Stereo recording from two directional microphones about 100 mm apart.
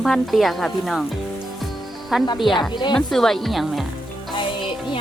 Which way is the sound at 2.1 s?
5° right (ahead or behind).